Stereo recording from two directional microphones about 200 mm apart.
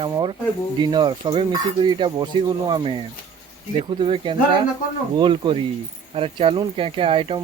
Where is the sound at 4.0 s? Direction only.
25° right (ahead or behind).